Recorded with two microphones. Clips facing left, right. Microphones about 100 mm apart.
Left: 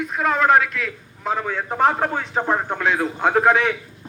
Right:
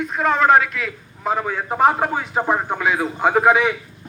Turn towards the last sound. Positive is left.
turn(degrees=-5)  # may be behind; listen again after turning